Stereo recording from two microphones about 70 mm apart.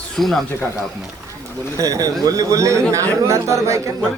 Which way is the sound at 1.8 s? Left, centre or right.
Right.